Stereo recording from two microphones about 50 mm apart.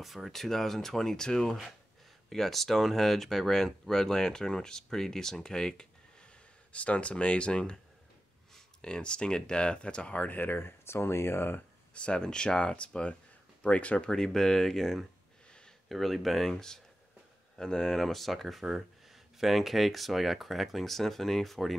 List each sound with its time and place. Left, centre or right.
0.0 s speech: centre; by 11.6 s left
11.9 s speech: left
14.1 s speech: centre